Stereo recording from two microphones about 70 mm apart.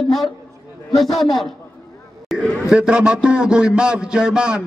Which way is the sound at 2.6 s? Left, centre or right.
Centre.